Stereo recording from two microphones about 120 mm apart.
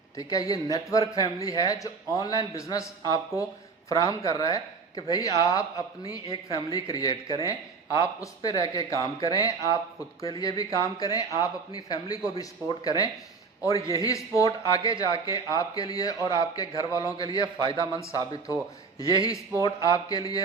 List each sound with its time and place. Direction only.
0.2 s a man's voice: 30° left (ahead or behind)